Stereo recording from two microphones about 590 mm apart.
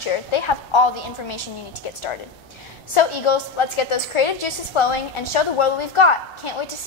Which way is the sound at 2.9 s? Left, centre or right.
Left.